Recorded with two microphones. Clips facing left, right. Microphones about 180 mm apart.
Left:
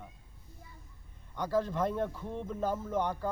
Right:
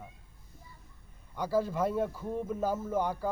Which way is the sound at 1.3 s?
10° right (ahead or behind).